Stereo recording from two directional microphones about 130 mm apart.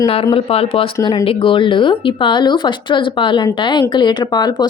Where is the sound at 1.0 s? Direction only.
30° left (ahead or behind).